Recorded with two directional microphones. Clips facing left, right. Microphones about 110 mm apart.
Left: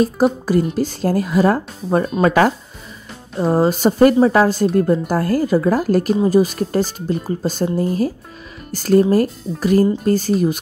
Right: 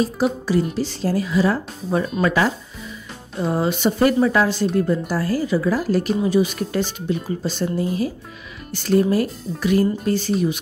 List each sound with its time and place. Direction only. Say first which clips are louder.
0.0 s speech: left 5 dB; 45° left (ahead or behind)
3.3 s speech: left 5 dB; 40° left (ahead or behind)